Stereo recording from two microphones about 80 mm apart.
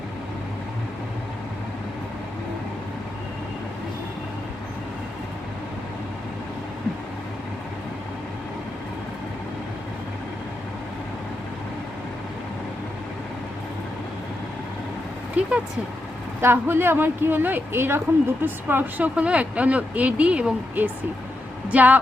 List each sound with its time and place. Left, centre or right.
15.4 s vehicle: centre
16.4 s speech: right